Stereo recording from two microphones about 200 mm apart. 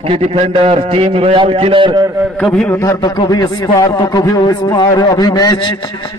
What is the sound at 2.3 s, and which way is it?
Speech, 5° left (ahead or behind).